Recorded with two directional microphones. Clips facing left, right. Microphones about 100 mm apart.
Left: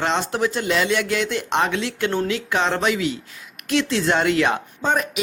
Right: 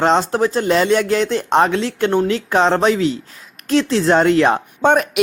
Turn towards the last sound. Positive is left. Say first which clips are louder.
# right 7 dB
turn(degrees=-60)  # may be behind; listen again after turning